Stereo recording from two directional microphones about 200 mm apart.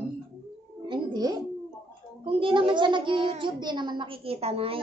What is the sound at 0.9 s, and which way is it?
Music, 20° right (ahead or behind).